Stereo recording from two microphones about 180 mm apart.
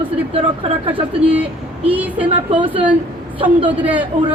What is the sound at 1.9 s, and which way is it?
Speech, 10° right (ahead or behind).